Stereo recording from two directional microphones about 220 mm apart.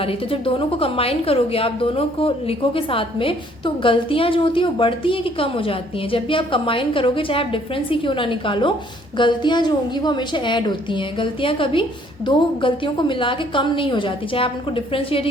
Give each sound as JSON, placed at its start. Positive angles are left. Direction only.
{"t": 0.0, "sound": "a woman's voice", "side_deg": 25}